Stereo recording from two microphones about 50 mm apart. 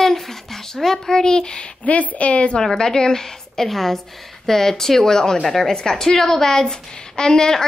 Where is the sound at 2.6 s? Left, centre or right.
Centre.